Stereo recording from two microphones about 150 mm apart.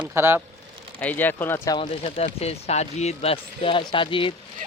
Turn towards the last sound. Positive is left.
turn(degrees=35)  # may be behind; listen again after turning